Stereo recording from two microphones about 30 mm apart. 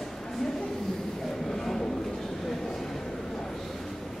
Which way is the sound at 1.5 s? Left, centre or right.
Centre.